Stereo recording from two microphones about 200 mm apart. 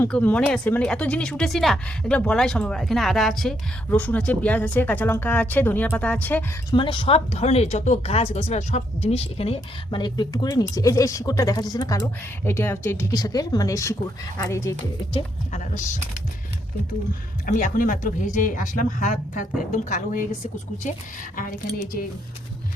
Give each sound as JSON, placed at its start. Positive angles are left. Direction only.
{"t": 0.0, "sound": "speech", "side_deg": 10}
{"t": 6.7, "sound": "speech", "side_deg": 25}
{"t": 15.1, "sound": "speech", "side_deg": 35}
{"t": 17.4, "sound": "speech", "side_deg": 45}